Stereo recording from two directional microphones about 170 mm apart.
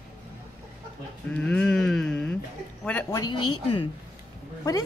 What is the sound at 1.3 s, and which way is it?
Speech, 5° left (ahead or behind).